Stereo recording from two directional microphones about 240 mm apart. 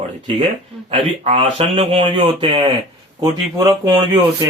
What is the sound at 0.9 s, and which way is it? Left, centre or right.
Speech, right.